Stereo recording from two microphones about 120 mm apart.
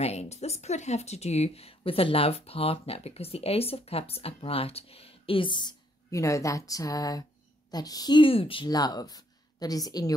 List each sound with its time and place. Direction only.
0.0 s speech: 65° left (ahead or behind); by 5.8 s 40° left (ahead or behind)
6.0 s speech: 25° left (ahead or behind); by 8.6 s 50° left (ahead or behind)
8.6 s speech: 35° left (ahead or behind)